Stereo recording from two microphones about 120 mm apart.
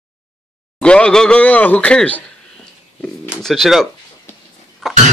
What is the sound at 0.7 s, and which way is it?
Speech, 10° left (ahead or behind).